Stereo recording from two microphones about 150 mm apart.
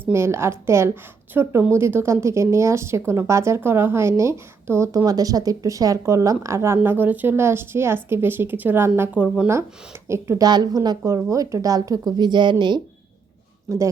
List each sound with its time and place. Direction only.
0.0 s a woman's voice: 15° right (ahead or behind)
10.1 s a woman's voice: 20° right (ahead or behind)